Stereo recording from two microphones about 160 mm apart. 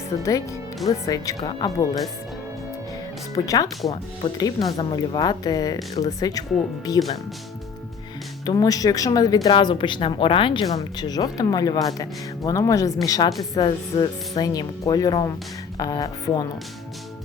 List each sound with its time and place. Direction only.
0.2 s a woman's voice: 20° left (ahead or behind)
3.3 s a woman's voice: 20° left (ahead or behind)
8.4 s a woman's voice: 25° left (ahead or behind)